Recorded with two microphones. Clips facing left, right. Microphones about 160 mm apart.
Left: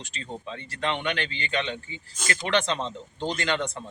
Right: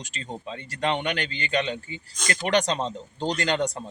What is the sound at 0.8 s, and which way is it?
Speech, 40° right (ahead or behind).